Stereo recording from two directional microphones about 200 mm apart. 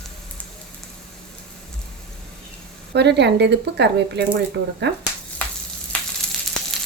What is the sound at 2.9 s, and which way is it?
Speech, 60° right (ahead or behind).